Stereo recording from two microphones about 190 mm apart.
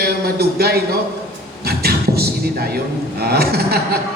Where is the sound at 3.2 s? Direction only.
55° right (ahead or behind).